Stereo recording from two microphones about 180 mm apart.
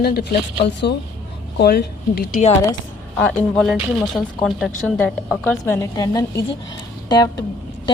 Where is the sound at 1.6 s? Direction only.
60° left (ahead or behind).